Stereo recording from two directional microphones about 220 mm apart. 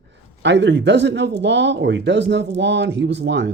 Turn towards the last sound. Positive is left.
turn(degrees=-50)  # may be behind; listen again after turning